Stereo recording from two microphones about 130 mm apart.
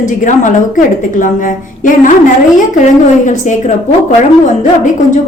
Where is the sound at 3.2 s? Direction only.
70° left (ahead or behind).